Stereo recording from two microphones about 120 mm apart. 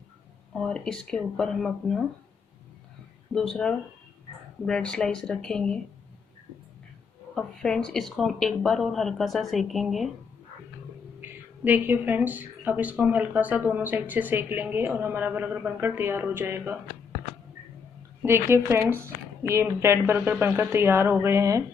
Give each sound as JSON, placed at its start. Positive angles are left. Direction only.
{"t": 0.6, "sound": "speech", "side_deg": 5}
{"t": 3.3, "sound": "speech", "side_deg": 5}
{"t": 7.3, "sound": "speech", "side_deg": 5}
{"t": 11.1, "sound": "speech", "side_deg": -15}
{"t": 18.2, "sound": "a woman's voice", "side_deg": -20}